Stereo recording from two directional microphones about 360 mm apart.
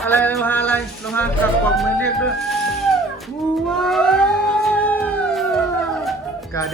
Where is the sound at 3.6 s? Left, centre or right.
Centre.